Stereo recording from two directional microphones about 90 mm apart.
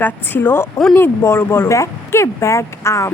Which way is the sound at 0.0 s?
25° left (ahead or behind).